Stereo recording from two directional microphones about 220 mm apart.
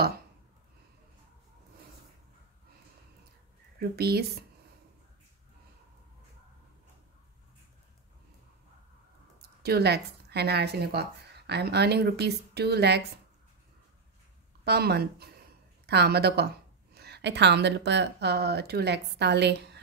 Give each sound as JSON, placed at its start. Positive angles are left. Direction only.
{"t": 3.9, "sound": "speech", "side_deg": -45}
{"t": 9.6, "sound": "speech", "side_deg": -45}
{"t": 14.6, "sound": "speech", "side_deg": -45}